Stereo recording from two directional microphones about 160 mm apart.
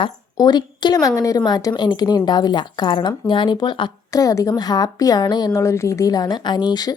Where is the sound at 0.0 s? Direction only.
25° left (ahead or behind).